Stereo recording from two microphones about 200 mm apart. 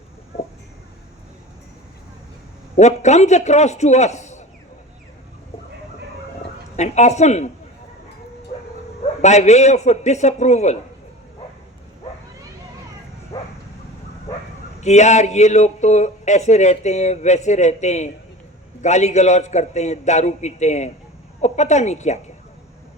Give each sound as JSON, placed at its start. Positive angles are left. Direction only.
{"t": 2.7, "sound": "speech", "side_deg": 35}
{"t": 6.7, "sound": "speech", "side_deg": 35}
{"t": 9.2, "sound": "speech", "side_deg": 35}
{"t": 13.3, "sound": "bow-wow", "side_deg": 20}
{"t": 14.8, "sound": "speech", "side_deg": 35}